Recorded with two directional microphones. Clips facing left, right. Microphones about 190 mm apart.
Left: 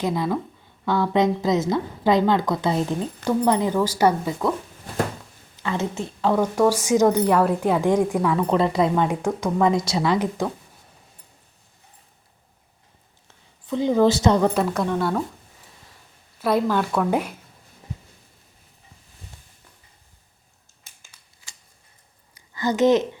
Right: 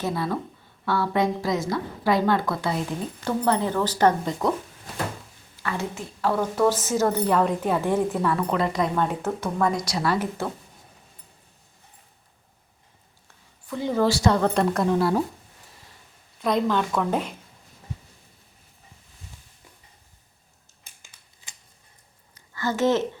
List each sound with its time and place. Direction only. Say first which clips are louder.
0.0 s a woman's voice: left 3 dB; 15° left (ahead or behind)
5.5 s speech: left 4 dB; 20° left (ahead or behind)
8.4 s a woman's voice: left 4 dB; 25° left (ahead or behind)
9.0 s speech: left 3 dB; 15° left (ahead or behind)
13.2 s a woman's voice: left 6 dB; 20° left (ahead or behind)
14.4 s speech: left 1 dB; 5° left (ahead or behind)
16.4 s speech: left 2 dB; 5° left (ahead or behind)
22.4 s a woman's voice: left 4 dB; 15° left (ahead or behind)